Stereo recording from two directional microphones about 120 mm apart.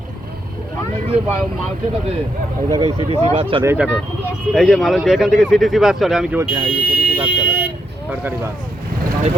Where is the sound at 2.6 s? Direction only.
30° right (ahead or behind).